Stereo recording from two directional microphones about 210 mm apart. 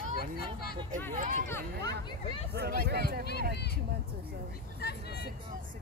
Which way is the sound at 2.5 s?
50° right (ahead or behind).